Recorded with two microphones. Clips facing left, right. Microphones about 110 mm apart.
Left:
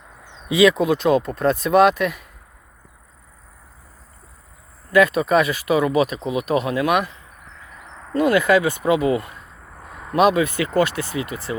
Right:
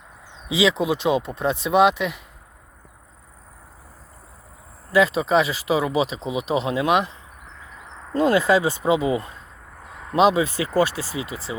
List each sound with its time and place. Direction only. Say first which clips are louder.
0.4 s speech: left 5 dB; 15° right (ahead or behind)
4.9 s speech: left 2 dB; 20° right (ahead or behind)
9.9 s a sound: left 2 dB; 15° left (ahead or behind)
10.2 s speech: left 1 dB; 20° right (ahead or behind)